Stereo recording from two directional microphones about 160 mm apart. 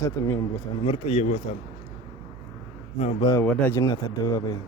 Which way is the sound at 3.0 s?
45° left (ahead or behind).